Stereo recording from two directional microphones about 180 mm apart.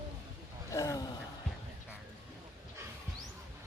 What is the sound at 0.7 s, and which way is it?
Gasp, 15° left (ahead or behind).